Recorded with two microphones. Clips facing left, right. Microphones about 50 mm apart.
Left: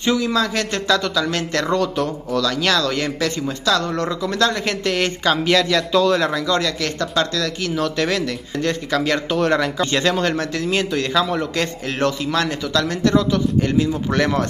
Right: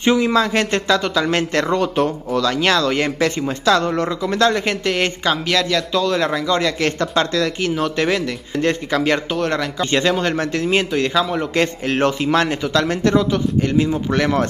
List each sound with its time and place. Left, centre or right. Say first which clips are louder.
0.0 s a man's voice: right 3 dB; right; by 5.4 s centre
5.4 s a man's voice: left 2 dB; centre
6.8 s a man's voice: right 3 dB; right
9.3 s a man's voice: left 2 dB; centre
9.8 s a man's voice: right 1 dB; centre
11.5 s a man's voice: right 5 dB; right
14.1 s a man's voice: right 1 dB; centre